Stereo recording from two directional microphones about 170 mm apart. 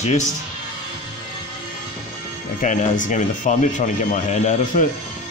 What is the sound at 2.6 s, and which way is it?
Speech, 50° left (ahead or behind).